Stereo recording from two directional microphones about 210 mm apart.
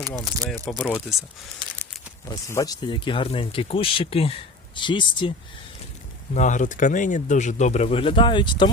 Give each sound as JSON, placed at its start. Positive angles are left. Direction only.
{"t": 0.0, "sound": "speech", "side_deg": 10}
{"t": 2.2, "sound": "speech", "side_deg": 15}
{"t": 6.3, "sound": "speech", "side_deg": 35}